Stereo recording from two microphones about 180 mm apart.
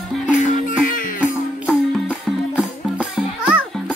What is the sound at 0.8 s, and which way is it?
Music, 50° left (ahead or behind).